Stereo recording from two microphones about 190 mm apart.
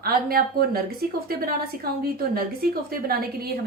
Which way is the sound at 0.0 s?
50° right (ahead or behind).